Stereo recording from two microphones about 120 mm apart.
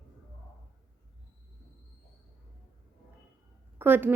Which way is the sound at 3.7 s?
15° right (ahead or behind).